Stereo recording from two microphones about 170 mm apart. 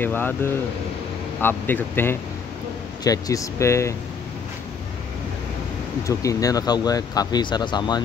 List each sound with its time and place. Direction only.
0.0 s speech: 10° left (ahead or behind)
6.0 s speech: 20° left (ahead or behind)